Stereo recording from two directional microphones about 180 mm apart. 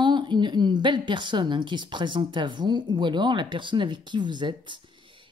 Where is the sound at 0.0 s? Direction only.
25° right (ahead or behind).